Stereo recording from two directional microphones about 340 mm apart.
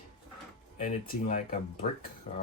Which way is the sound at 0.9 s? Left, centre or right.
Left.